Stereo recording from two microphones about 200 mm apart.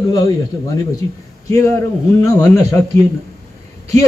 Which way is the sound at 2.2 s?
15° left (ahead or behind).